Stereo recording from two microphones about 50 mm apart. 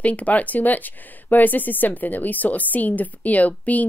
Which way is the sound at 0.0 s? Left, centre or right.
Left.